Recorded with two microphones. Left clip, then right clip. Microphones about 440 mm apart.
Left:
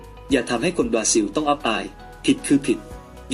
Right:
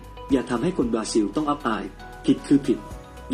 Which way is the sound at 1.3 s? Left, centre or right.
Centre.